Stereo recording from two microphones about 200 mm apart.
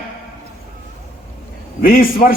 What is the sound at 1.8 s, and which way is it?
Speech, 45° left (ahead or behind).